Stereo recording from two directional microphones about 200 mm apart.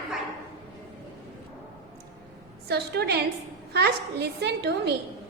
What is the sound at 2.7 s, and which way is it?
A woman's voice, 55° right (ahead or behind).